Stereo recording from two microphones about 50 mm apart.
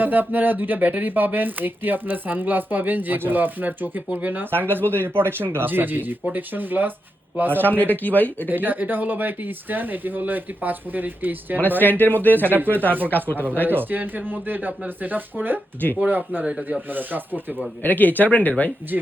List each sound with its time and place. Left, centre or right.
0.0 s speech: right
7.8 s speech: left
8.4 s speech: right
11.8 s speech: left
12.5 s speech: right
12.7 s speech: left
13.7 s speech: right
17.8 s speech: left